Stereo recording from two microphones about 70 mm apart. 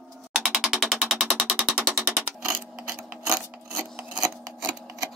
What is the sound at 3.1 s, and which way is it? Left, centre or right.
Filing, centre.